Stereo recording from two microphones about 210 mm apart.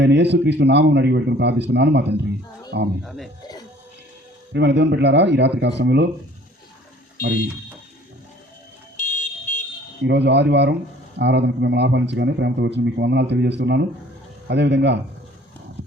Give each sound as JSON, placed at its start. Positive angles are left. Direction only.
{"t": 0.0, "sound": "speech", "side_deg": -55}
{"t": 3.0, "sound": "speech", "side_deg": 0}
{"t": 4.5, "sound": "speech", "side_deg": -55}
{"t": 9.0, "sound": "a sound", "side_deg": 35}
{"t": 10.0, "sound": "speech", "side_deg": -55}